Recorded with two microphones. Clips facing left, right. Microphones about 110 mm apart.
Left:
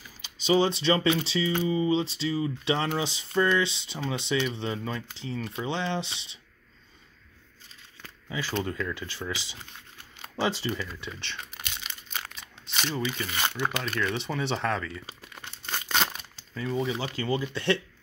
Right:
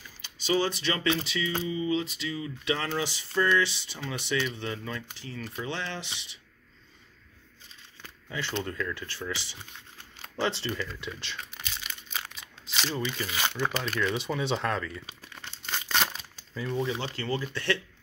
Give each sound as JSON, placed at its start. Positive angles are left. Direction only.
{"t": 0.2, "sound": "speech", "side_deg": 20}
{"t": 8.3, "sound": "speech", "side_deg": 10}
{"t": 15.2, "sound": "crumpling", "side_deg": 15}
{"t": 15.9, "sound": "a sound", "side_deg": 0}
{"t": 16.6, "sound": "speech", "side_deg": 0}